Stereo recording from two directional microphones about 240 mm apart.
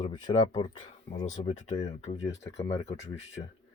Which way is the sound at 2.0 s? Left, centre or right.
Left.